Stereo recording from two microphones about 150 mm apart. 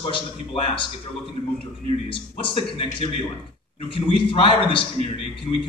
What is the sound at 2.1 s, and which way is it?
Speech, 35° left (ahead or behind).